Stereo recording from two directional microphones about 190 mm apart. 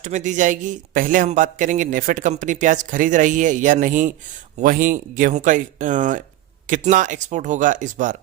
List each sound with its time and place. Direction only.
0.0 s a man's voice: 40° right (ahead or behind)